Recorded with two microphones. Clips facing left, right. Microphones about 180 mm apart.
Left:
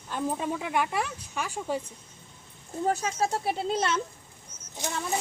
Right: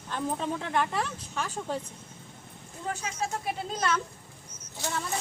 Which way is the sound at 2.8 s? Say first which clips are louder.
Left 6 dB; 40° left (ahead or behind).